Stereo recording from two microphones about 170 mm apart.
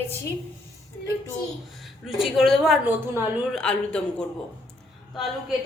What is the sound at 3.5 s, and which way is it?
A woman's voice, 5° left (ahead or behind).